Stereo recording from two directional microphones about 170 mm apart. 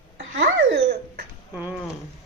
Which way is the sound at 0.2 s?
90° right.